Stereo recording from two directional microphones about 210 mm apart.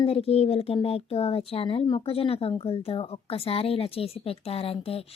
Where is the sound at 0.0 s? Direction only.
25° left (ahead or behind).